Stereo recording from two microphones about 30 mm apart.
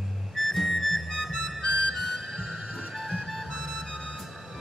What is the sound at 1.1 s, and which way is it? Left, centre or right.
Harmonica, centre.